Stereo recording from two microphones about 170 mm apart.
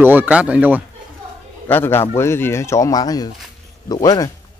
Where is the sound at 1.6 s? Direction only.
10° left (ahead or behind).